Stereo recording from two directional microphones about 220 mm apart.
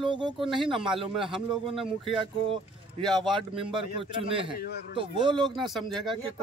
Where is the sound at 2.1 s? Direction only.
25° right (ahead or behind).